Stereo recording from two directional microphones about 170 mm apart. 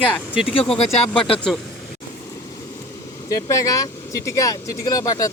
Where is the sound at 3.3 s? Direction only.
20° left (ahead or behind).